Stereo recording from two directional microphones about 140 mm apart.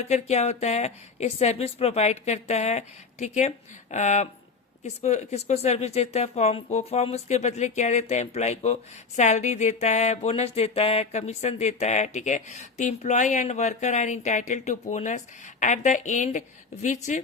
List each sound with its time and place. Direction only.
0.0 s a woman's voice: 50° left (ahead or behind)